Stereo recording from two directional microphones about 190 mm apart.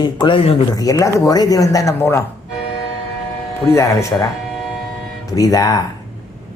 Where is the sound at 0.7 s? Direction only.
20° left (ahead or behind).